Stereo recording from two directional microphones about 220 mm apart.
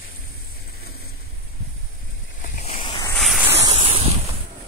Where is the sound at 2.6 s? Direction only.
25° left (ahead or behind).